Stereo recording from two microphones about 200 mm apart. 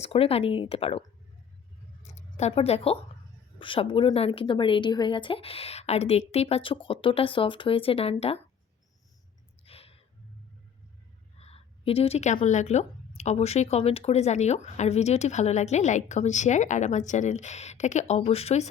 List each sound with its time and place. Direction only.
0.0 s speech: 30° left (ahead or behind)
2.0 s speech: 35° left (ahead or behind)
9.6 s a sound: 30° left (ahead or behind)
11.3 s a woman's voice: 30° left (ahead or behind)